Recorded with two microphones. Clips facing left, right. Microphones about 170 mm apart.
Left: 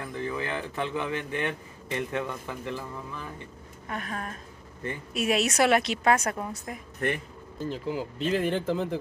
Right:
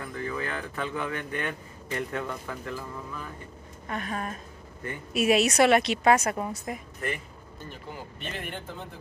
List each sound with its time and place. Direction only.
0.1 s speech: 20° left (ahead or behind)
3.8 s a woman's voice: centre (ahead or behind)
7.6 s speech: 90° left